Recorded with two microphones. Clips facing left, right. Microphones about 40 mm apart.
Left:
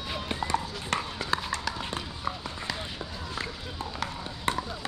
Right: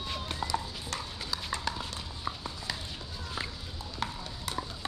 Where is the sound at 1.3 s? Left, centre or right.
Left.